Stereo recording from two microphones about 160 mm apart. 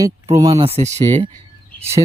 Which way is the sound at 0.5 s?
40° right (ahead or behind).